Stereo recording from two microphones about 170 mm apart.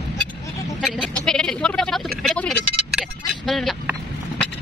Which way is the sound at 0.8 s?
5° left (ahead or behind).